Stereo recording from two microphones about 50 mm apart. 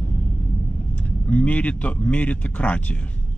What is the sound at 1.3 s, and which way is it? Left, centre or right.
Speech, left.